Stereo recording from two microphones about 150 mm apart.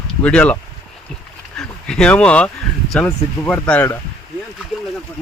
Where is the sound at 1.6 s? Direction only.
5° left (ahead or behind).